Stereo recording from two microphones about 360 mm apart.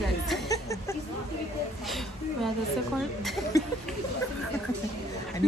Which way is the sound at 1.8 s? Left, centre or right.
Centre.